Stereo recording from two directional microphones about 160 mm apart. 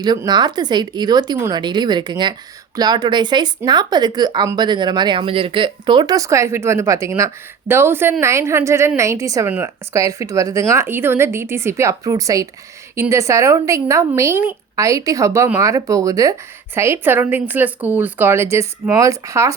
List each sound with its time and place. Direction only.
0.0 s a woman's voice: 25° right (ahead or behind)